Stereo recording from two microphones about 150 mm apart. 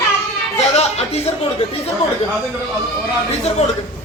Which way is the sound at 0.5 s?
45° left (ahead or behind).